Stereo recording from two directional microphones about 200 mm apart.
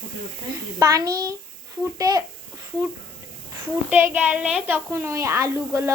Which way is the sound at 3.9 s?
10° right (ahead or behind).